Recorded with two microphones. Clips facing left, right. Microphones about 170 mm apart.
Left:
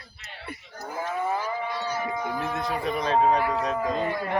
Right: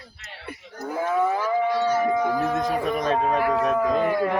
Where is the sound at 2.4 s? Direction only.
45° right (ahead or behind).